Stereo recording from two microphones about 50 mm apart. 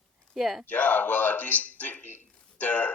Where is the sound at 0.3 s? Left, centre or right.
Centre.